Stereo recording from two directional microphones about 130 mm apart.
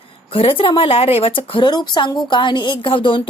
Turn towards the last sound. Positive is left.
turn(degrees=40)  # may be behind; listen again after turning